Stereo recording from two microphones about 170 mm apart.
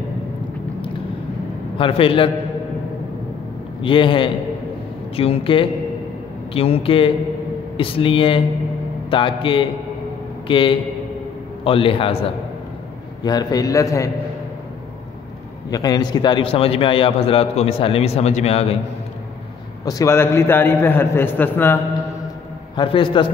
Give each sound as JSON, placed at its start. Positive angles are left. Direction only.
{"t": 1.8, "sound": "a man's voice", "side_deg": 35}
{"t": 3.8, "sound": "a man's voice", "side_deg": 30}
{"t": 13.2, "sound": "a man's voice", "side_deg": 25}
{"t": 15.7, "sound": "a man's voice", "side_deg": 20}
{"t": 19.8, "sound": "a man's voice", "side_deg": 20}
{"t": 22.8, "sound": "a man's voice", "side_deg": 30}